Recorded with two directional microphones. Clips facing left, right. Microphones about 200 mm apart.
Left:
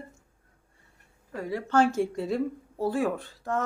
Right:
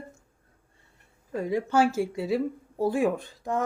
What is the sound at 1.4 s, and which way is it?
Speech, 15° right (ahead or behind).